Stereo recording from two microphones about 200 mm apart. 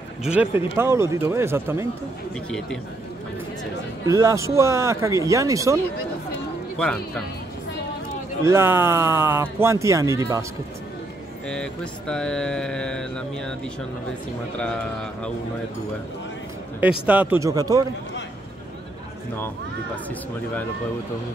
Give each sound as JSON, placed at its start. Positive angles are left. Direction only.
{"t": 0.2, "sound": "speech", "side_deg": -5}
{"t": 4.1, "sound": "speech", "side_deg": -15}
{"t": 6.8, "sound": "speech", "side_deg": 5}
{"t": 8.5, "sound": "speech", "side_deg": -10}
{"t": 11.4, "sound": "speech", "side_deg": 5}
{"t": 14.6, "sound": "speech", "side_deg": 5}
{"t": 17.0, "sound": "speech", "side_deg": -5}